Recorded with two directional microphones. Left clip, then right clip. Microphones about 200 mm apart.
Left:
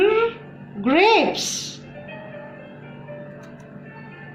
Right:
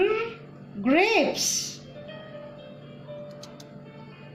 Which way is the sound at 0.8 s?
50° right (ahead or behind).